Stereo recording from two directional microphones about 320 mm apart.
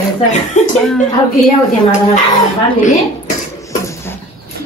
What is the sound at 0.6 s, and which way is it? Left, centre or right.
Speech, left.